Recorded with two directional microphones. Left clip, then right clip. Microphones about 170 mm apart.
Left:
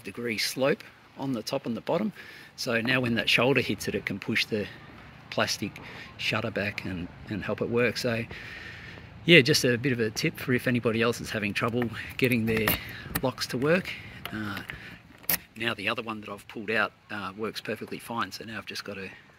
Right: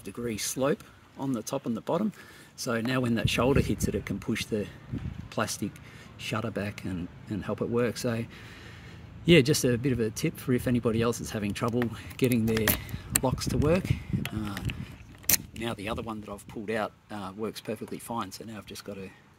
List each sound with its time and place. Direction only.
0.3 s speech: 30° right (ahead or behind)
15.6 s speech: 30° right (ahead or behind)
18.6 s speech: 15° right (ahead or behind)